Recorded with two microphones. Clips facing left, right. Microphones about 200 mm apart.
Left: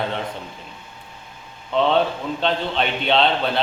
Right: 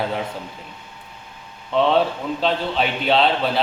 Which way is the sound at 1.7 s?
Centre (ahead or behind).